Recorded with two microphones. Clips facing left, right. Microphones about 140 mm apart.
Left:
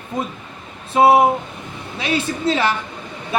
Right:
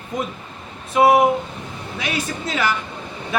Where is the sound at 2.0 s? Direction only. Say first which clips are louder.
Left 6 dB; 30° left (ahead or behind).